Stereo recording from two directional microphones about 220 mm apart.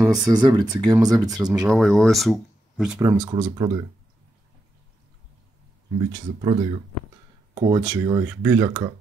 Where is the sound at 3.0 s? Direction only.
20° right (ahead or behind).